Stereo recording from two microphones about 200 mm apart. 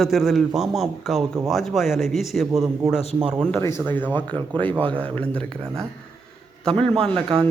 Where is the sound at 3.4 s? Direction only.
10° left (ahead or behind).